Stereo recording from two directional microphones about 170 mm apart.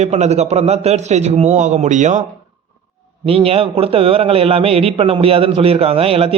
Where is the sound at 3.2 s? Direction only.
35° right (ahead or behind).